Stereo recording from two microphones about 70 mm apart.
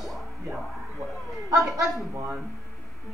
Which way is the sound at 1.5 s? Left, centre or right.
Right.